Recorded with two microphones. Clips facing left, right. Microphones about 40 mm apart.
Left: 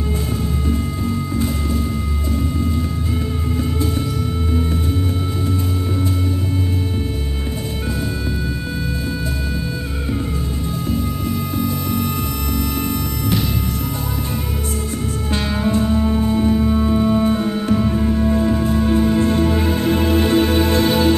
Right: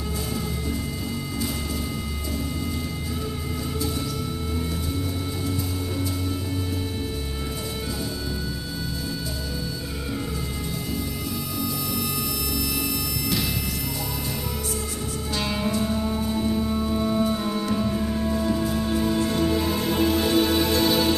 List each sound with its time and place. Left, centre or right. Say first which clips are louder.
15.3 s music: left 6 dB; left